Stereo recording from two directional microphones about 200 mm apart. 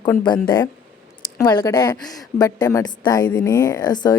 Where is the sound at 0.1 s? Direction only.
20° left (ahead or behind).